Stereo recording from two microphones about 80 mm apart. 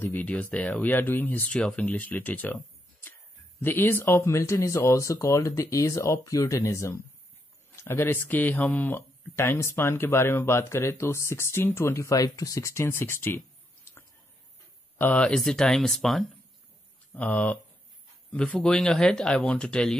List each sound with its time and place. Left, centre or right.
0.0 s speech: left
3.6 s speech: left
8.3 s speech: left
15.0 s speech: centre
17.1 s speech: centre